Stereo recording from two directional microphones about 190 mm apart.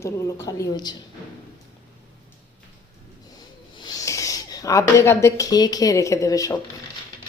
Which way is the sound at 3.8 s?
20° left (ahead or behind).